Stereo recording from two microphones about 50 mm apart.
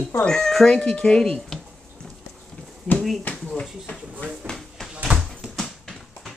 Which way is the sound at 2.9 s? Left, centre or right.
Left.